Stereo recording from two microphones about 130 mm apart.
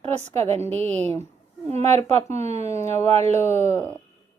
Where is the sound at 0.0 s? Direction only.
55° right (ahead or behind).